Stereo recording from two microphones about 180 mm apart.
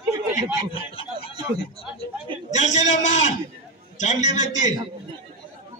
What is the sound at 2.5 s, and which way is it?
A man's voice, 40° left (ahead or behind).